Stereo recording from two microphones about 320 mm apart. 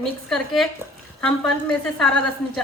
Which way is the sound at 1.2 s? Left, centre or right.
Centre.